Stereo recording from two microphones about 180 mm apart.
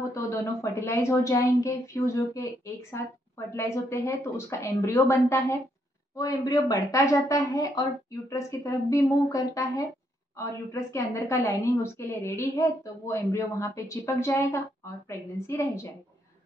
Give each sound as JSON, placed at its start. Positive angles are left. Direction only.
{"t": 0.1, "sound": "a woman's voice", "side_deg": 15}